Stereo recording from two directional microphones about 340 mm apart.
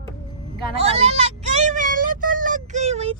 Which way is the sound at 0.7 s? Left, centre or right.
Centre.